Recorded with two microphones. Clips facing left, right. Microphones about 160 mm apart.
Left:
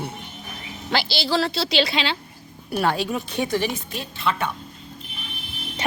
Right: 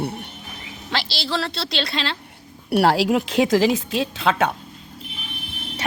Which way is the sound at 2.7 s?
80° right.